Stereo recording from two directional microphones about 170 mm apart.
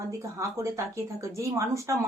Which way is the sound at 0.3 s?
15° right (ahead or behind).